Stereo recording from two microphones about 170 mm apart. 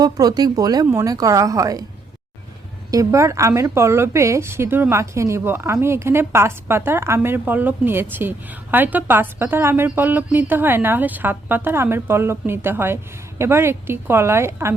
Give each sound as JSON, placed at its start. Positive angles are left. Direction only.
{"t": 0.0, "sound": "a woman's voice", "side_deg": -25}
{"t": 2.9, "sound": "speech", "side_deg": -20}